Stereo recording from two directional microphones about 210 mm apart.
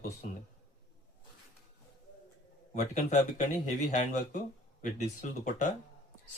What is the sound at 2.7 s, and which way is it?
Speech, 35° left (ahead or behind).